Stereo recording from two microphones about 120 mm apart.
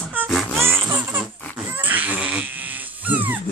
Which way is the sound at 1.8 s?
15° right (ahead or behind).